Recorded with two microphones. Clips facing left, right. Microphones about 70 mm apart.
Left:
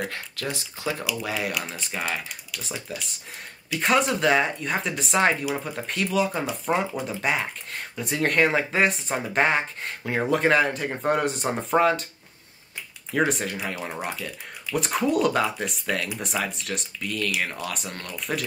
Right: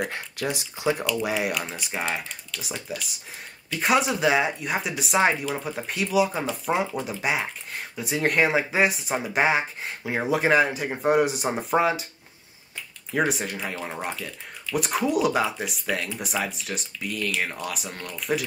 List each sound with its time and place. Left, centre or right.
0.0 s speech: centre
2.6 s speech: centre
13.1 s speech: centre